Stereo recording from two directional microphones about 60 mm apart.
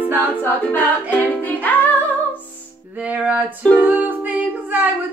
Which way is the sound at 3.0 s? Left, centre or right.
Right.